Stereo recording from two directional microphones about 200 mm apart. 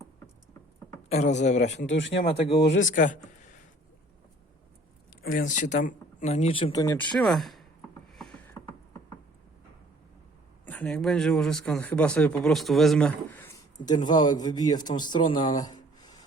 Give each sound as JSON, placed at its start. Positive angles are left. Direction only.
{"t": 1.1, "sound": "speech", "side_deg": 35}
{"t": 1.9, "sound": "speech", "side_deg": 65}
{"t": 2.2, "sound": "speech", "side_deg": 25}
{"t": 2.8, "sound": "speech", "side_deg": 40}
{"t": 5.2, "sound": "speech", "side_deg": 40}
{"t": 6.8, "sound": "speech", "side_deg": 5}
{"t": 10.7, "sound": "speech", "side_deg": 5}
{"t": 13.8, "sound": "speech", "side_deg": 20}